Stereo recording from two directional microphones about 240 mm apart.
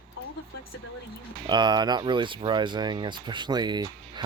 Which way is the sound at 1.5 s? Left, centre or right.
Centre.